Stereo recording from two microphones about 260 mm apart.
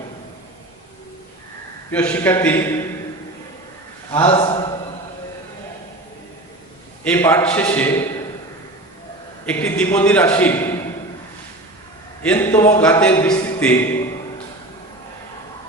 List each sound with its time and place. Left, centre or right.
1.9 s a man's voice: centre
4.1 s a sound: centre
7.0 s a man's voice: centre
9.5 s a man's voice: centre
12.2 s a man's voice: centre